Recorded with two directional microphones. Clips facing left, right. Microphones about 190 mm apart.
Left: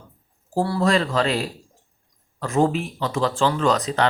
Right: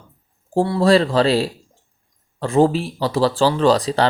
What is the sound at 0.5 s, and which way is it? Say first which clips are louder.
Speech: right 5 dB; 25° right (ahead or behind).